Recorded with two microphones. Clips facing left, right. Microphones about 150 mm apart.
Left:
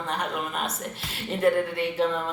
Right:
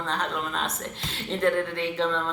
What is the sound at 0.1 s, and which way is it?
A woman's voice, 10° left (ahead or behind).